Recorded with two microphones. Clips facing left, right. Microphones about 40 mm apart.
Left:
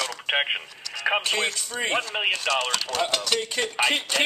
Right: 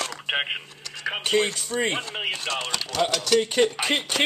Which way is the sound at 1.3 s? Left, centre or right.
Left.